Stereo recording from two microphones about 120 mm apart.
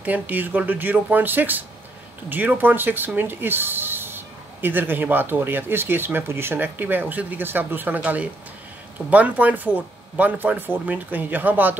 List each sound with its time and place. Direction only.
0.0 s speech: 15° right (ahead or behind)